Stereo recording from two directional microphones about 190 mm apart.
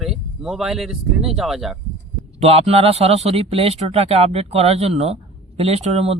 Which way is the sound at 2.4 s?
30° right (ahead or behind).